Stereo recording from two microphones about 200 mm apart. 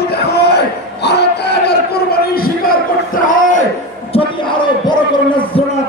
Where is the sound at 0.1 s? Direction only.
55° left (ahead or behind).